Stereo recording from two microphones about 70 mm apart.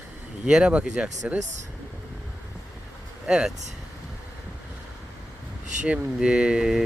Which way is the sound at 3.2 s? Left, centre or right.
Centre.